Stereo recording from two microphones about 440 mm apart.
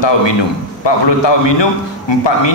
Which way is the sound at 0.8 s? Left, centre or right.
Left.